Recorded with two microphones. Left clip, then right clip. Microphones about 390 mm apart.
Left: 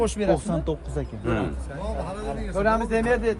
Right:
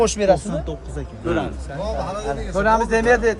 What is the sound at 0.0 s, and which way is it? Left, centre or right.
Speech, right.